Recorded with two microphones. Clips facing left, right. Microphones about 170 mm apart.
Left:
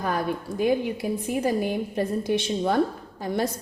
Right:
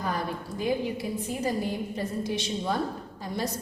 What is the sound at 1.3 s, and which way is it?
A woman's voice, 60° left (ahead or behind).